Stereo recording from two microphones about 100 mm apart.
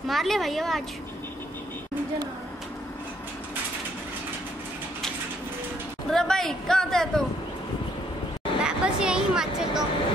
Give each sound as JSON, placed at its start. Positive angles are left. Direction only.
{"t": 0.1, "sound": "a man's voice", "side_deg": 0}
{"t": 6.0, "sound": "a man's voice", "side_deg": 5}
{"t": 8.6, "sound": "a sound", "side_deg": -10}